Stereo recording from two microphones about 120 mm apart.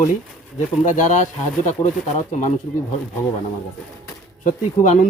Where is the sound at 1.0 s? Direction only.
90° left.